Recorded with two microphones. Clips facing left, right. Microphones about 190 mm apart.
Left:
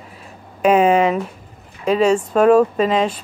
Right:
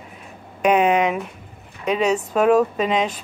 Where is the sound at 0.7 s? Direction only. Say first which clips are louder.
Left 3 dB; centre (ahead or behind).